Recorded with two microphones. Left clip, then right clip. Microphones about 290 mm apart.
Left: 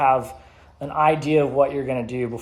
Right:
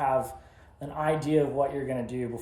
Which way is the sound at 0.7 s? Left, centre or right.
Left.